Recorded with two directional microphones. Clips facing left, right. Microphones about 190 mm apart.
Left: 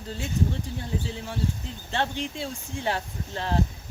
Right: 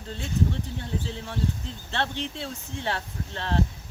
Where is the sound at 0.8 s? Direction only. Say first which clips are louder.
Left 1 dB; 5° left (ahead or behind).